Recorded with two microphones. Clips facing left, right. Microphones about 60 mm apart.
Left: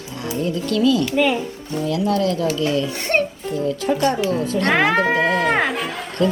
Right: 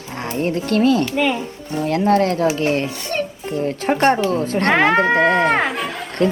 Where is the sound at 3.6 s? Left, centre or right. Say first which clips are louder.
Right 2 dB; right.